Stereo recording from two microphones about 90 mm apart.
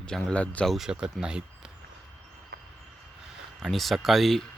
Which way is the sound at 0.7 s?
5° right (ahead or behind).